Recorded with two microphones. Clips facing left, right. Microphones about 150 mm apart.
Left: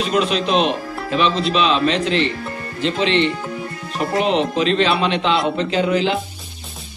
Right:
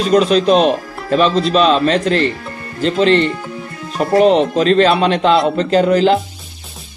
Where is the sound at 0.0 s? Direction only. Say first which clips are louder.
Right 7 dB; 40° right (ahead or behind).